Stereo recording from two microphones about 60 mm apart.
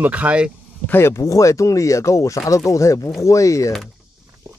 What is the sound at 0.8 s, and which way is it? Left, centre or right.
Speech, left.